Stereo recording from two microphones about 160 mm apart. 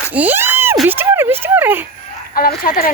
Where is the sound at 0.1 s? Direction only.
10° right (ahead or behind).